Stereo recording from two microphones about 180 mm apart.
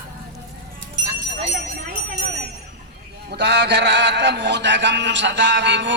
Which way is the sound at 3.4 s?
70° right (ahead or behind).